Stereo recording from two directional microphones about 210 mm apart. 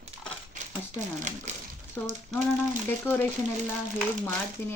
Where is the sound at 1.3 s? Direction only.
35° right (ahead or behind).